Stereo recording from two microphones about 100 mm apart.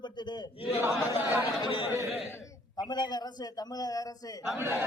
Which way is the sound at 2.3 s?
35° left (ahead or behind).